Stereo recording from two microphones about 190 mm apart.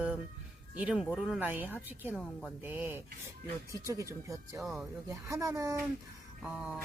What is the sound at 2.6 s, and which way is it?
Speech, 10° right (ahead or behind).